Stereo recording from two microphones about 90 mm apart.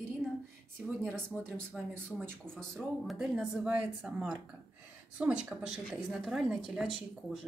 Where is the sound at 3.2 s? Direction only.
5° right (ahead or behind).